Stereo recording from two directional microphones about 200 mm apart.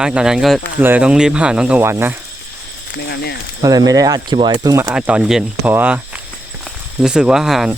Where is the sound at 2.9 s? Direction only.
55° left (ahead or behind).